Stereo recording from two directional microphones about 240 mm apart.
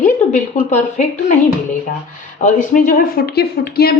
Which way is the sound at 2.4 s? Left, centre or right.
Left.